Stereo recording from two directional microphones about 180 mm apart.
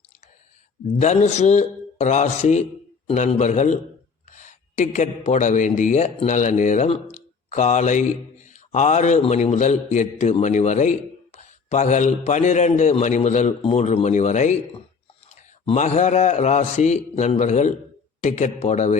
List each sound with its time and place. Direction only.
0.9 s a man's voice: 40° left (ahead or behind)